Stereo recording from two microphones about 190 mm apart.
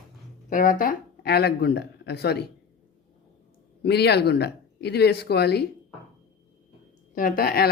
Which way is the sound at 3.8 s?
60° left (ahead or behind).